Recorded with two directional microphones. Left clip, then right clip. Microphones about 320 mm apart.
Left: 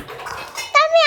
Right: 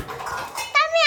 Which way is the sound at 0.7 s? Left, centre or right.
Centre.